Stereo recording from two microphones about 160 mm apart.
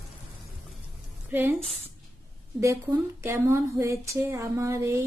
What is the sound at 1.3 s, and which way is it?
Speech, 10° right (ahead or behind).